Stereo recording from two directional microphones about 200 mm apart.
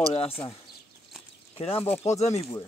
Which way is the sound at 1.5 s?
30° left (ahead or behind).